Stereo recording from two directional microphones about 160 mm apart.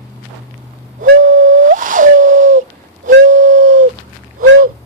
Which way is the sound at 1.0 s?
60° right (ahead or behind).